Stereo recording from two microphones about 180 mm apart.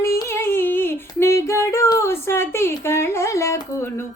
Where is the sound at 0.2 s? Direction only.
15° left (ahead or behind).